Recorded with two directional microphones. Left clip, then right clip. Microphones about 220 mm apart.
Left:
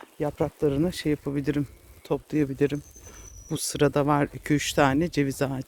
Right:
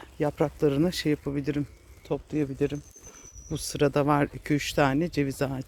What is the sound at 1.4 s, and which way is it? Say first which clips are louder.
Speech: left 2 dB; 20° left (ahead or behind).